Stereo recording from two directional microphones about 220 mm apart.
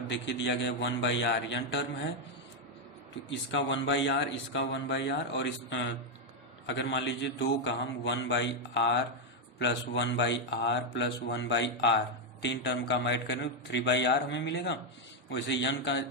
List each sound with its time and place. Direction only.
0.1 s speech: 55° left (ahead or behind)
3.2 s speech: 55° left (ahead or behind)